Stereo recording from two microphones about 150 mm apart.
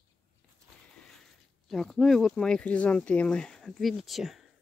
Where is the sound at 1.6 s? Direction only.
Centre (ahead or behind).